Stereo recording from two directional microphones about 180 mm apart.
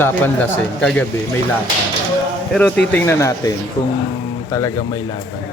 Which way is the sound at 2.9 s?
15° left (ahead or behind).